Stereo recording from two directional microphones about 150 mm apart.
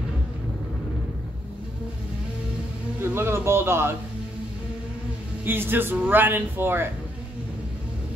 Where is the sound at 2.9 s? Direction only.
15° right (ahead or behind).